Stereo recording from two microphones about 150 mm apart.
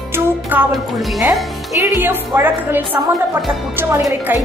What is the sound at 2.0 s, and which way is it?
Music, 15° right (ahead or behind).